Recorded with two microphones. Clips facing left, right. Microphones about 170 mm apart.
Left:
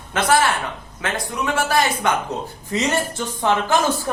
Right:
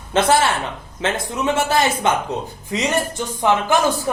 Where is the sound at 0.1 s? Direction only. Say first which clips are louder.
Right 2 dB; 25° right (ahead or behind).